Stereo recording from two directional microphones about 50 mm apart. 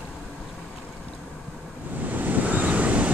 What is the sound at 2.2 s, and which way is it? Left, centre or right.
Waves, right.